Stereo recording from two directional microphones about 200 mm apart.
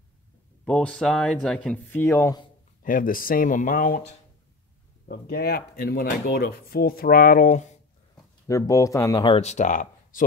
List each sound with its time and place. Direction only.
0.7 s speech: 5° left (ahead or behind)
2.8 s speech: 45° left (ahead or behind)
8.5 s speech: 15° left (ahead or behind); by 10.2 s 40° left (ahead or behind)